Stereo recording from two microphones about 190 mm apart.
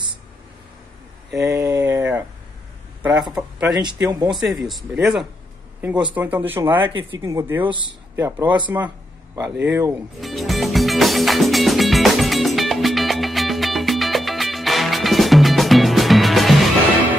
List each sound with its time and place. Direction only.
1.4 s a sound: 15° right (ahead or behind)
3.0 s speech: 5° right (ahead or behind)
3.8 s speech: 20° right (ahead or behind)
4.3 s speech: centre (ahead or behind)
8.7 s a sound: 15° right (ahead or behind)
9.7 s speech: 15° right (ahead or behind)
10.2 s music: centre (ahead or behind)